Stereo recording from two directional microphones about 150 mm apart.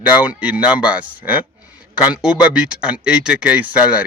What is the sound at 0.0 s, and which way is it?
Speech, 10° right (ahead or behind).